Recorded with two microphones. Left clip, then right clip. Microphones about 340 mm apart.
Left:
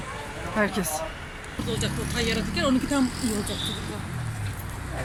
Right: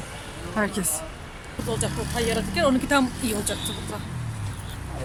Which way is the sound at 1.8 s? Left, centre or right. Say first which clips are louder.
Right 1 dB; right.